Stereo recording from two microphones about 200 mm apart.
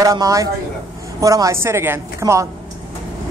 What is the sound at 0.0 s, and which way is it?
Speech, 15° right (ahead or behind).